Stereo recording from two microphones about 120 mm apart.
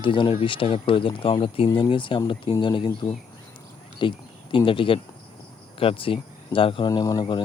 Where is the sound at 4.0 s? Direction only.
45° left (ahead or behind).